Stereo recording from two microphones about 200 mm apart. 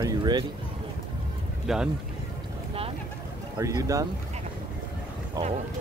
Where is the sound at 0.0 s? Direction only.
20° right (ahead or behind).